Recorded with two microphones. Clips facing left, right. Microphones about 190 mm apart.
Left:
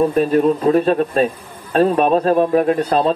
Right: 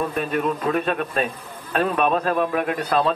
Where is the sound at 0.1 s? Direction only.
30° left (ahead or behind).